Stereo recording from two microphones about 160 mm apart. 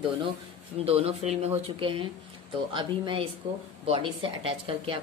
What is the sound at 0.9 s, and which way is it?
Speech, 40° right (ahead or behind).